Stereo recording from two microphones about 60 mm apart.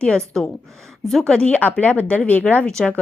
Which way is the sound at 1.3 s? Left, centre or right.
Left.